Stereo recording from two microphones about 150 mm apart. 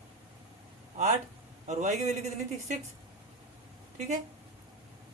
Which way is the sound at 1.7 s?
50° right (ahead or behind).